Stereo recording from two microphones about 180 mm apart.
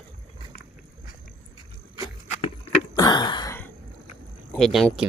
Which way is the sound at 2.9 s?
25° left (ahead or behind).